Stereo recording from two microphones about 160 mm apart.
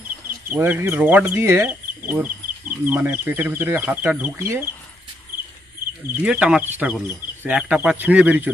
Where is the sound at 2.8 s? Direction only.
10° right (ahead or behind).